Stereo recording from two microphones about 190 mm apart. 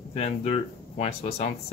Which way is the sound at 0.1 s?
35° left (ahead or behind).